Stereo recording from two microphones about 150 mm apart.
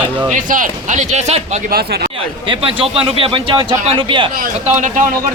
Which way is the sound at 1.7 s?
90° right.